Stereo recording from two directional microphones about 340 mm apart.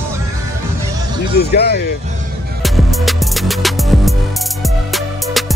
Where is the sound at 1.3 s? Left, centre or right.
Left.